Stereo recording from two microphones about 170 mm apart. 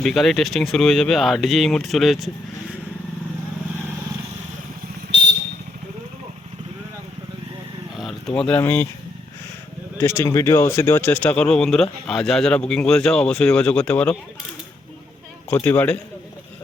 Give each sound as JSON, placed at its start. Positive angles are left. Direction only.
{"t": 0.0, "sound": "speech", "side_deg": 0}
{"t": 5.1, "sound": "vehicle", "side_deg": -90}
{"t": 7.9, "sound": "speech", "side_deg": 0}
{"t": 10.0, "sound": "speech", "side_deg": 15}
{"t": 15.4, "sound": "a man's voice", "side_deg": 10}